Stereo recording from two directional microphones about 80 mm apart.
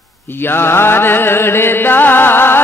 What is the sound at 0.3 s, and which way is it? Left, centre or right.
Music, left.